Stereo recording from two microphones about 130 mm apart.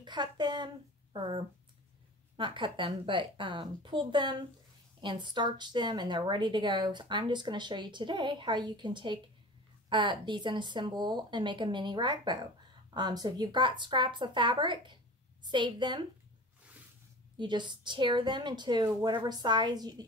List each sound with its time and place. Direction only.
0.0 s a woman's voice: 35° right (ahead or behind)
17.4 s a woman's voice: 35° right (ahead or behind)